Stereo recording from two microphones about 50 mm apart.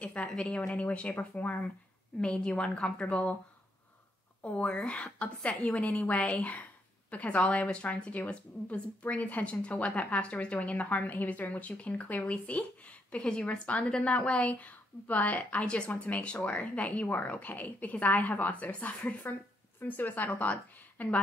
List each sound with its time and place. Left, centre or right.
0.0 s a sound: left
0.4 s a woman's voice: left
2.1 s a woman's voice: centre
4.4 s a woman's voice: left
15.6 s a woman's voice: left